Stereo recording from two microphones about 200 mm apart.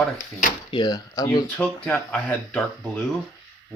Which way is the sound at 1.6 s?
5° left (ahead or behind).